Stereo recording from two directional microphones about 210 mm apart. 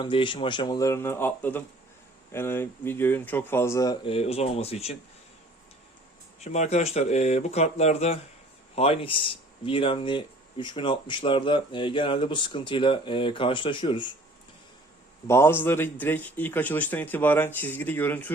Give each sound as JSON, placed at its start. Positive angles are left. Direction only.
{"t": 0.0, "sound": "speech", "side_deg": 25}
{"t": 6.4, "sound": "speech", "side_deg": 30}
{"t": 15.3, "sound": "speech", "side_deg": 10}